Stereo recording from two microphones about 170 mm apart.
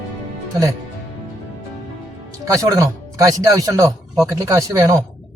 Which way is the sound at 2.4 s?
20° right (ahead or behind).